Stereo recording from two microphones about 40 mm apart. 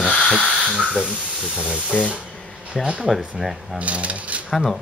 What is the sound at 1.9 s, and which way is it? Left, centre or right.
Speech, left.